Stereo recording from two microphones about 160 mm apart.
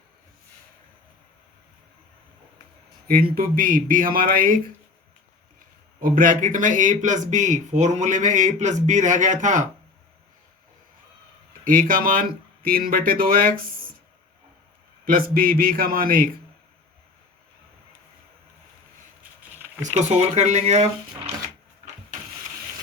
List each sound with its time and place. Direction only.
3.2 s speech: 65° right (ahead or behind)
6.0 s a man's voice: 60° right (ahead or behind)
11.6 s speech: 60° right (ahead or behind)
15.0 s speech: 65° right (ahead or behind)
19.8 s a man's voice: 45° right (ahead or behind)